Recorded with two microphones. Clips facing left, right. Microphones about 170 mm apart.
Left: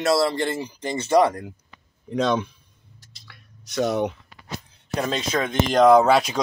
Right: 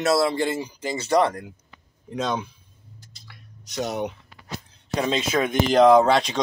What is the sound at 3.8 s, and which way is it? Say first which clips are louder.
Speech: left 5 dB; 50° left (ahead or behind).